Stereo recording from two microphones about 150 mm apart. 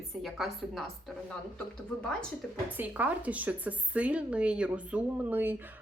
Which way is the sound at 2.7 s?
10° right (ahead or behind).